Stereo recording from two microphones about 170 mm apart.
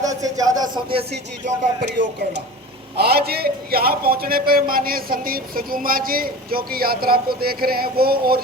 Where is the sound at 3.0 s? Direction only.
65° right (ahead or behind).